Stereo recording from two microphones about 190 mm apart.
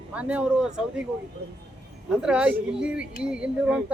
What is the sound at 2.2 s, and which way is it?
Speech, 5° right (ahead or behind).